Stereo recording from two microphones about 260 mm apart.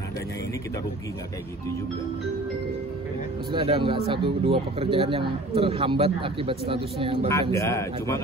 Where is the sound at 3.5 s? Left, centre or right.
Right.